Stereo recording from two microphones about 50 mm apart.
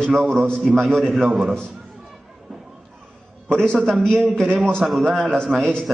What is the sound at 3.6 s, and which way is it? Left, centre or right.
A man's voice, centre.